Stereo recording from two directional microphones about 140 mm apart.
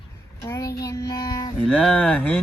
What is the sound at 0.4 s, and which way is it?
Child singing, 20° left (ahead or behind).